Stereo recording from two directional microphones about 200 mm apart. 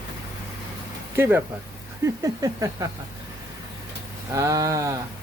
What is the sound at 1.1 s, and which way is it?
Speech, 10° right (ahead or behind).